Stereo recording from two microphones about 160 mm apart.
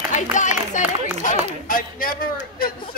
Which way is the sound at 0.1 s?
50° left (ahead or behind).